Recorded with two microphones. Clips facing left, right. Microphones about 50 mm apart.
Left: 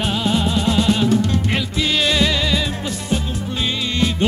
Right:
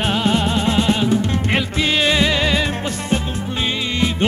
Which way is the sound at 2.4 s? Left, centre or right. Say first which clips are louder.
Right 2 dB; right.